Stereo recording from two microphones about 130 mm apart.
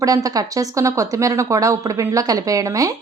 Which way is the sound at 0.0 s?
25° right (ahead or behind).